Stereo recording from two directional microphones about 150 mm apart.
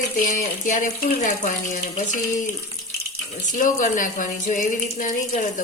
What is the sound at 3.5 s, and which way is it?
Speech, 60° left (ahead or behind).